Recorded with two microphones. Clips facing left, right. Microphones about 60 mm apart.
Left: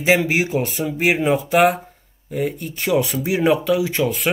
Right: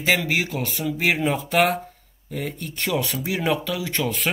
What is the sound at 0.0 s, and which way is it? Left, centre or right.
Speech, left.